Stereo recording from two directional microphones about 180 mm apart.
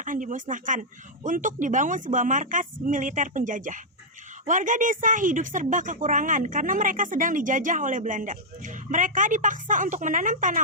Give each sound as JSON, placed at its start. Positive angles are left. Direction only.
{"t": 0.0, "sound": "a woman's voice", "side_deg": -45}